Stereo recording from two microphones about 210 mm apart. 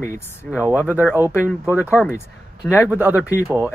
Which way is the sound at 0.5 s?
5° right (ahead or behind).